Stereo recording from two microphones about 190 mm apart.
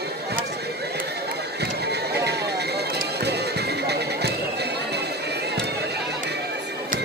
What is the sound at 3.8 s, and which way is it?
Music, 60° right (ahead or behind).